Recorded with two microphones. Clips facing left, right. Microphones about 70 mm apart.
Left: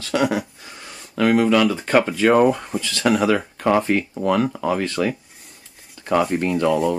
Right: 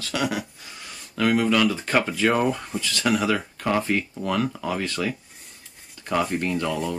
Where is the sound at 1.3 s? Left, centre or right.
Centre.